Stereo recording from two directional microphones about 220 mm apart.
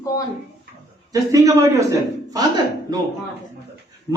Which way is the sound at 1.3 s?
15° right (ahead or behind).